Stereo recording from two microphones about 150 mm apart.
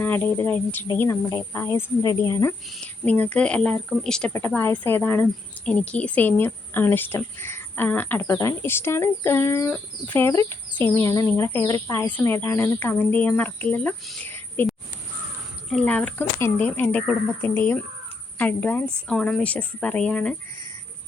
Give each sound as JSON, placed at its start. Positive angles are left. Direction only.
{"t": 0.0, "sound": "speech", "side_deg": 15}
{"t": 14.3, "sound": "a sound", "side_deg": 15}
{"t": 15.7, "sound": "speech", "side_deg": 10}